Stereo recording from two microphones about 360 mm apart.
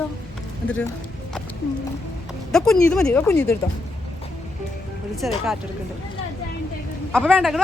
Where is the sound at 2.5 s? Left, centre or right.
Centre.